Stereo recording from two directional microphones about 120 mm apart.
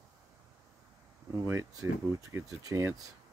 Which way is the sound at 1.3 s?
25° right (ahead or behind).